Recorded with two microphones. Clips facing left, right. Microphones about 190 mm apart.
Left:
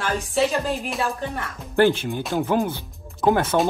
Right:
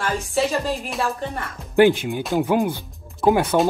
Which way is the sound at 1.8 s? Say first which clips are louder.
Right 3 dB; 15° right (ahead or behind).